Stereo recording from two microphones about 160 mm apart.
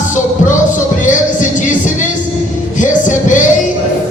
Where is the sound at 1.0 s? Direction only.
50° left (ahead or behind).